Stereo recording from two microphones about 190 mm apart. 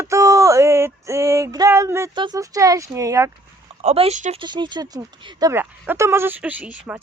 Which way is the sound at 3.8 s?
35° right (ahead or behind).